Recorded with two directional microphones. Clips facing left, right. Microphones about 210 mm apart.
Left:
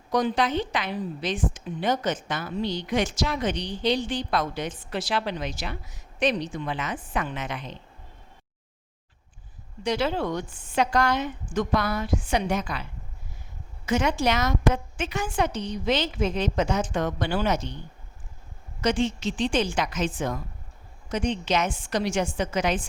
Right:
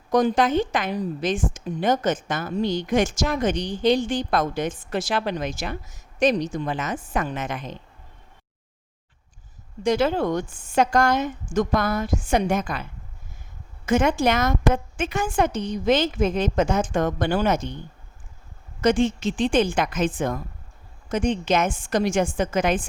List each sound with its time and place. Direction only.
0.1 s speech: 45° right (ahead or behind)
9.8 s speech: 45° right (ahead or behind)
18.8 s speech: 50° right (ahead or behind)